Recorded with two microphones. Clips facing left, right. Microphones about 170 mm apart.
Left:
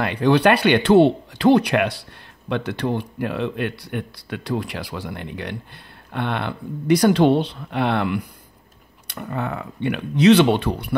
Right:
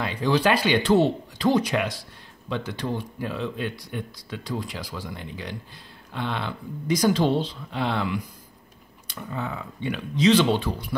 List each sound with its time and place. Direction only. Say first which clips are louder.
0.0 s speech: left 6 dB; 65° left (ahead or behind)